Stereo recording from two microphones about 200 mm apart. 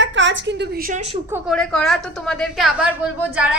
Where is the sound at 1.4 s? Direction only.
5° left (ahead or behind).